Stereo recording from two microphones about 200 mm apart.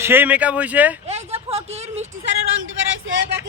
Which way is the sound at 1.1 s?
30° right (ahead or behind).